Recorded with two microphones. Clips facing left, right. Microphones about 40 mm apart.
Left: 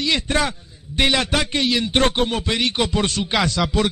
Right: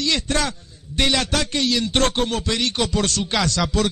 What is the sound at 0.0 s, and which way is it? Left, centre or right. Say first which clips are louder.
A man's voice: left 2 dB; centre.